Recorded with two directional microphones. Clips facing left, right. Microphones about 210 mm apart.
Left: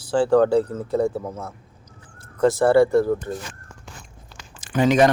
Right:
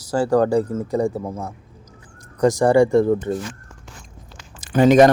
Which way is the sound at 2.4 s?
15° right (ahead or behind).